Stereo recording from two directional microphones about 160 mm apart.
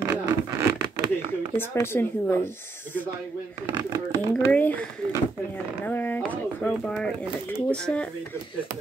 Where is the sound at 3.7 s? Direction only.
25° right (ahead or behind).